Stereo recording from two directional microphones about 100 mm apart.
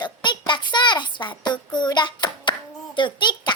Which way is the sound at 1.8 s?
50° left (ahead or behind).